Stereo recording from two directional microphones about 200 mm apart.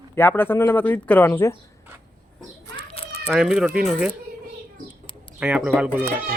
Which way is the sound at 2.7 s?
30° left (ahead or behind).